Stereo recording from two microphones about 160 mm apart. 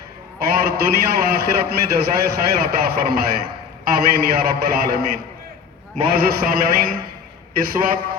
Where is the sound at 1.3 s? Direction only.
75° right (ahead or behind).